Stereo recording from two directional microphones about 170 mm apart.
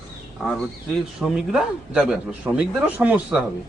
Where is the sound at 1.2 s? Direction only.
5° right (ahead or behind).